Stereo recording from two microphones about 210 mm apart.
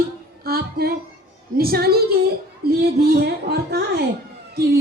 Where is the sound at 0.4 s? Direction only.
45° right (ahead or behind).